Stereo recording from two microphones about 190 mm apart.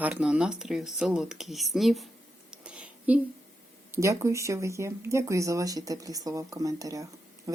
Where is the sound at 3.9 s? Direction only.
15° right (ahead or behind).